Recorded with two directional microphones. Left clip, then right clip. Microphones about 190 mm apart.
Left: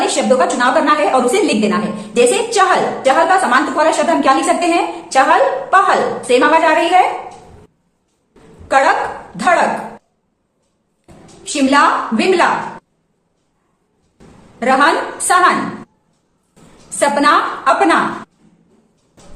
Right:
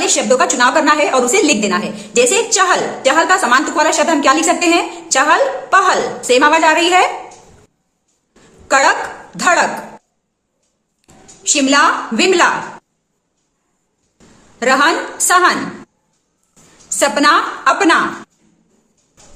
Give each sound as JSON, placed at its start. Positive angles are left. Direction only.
{"t": 0.0, "sound": "a woman's voice", "side_deg": -35}
{"t": 8.6, "sound": "a woman's voice", "side_deg": -40}
{"t": 11.4, "sound": "a woman's voice", "side_deg": -40}
{"t": 14.6, "sound": "a woman's voice", "side_deg": -40}
{"t": 17.0, "sound": "a woman's voice", "side_deg": -40}